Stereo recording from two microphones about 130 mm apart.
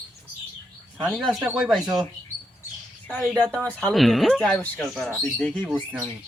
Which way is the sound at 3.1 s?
10° left (ahead or behind).